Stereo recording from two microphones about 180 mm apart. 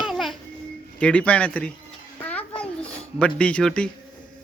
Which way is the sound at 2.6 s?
5° left (ahead or behind).